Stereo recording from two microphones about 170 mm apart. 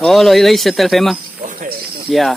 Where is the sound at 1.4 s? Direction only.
55° right (ahead or behind).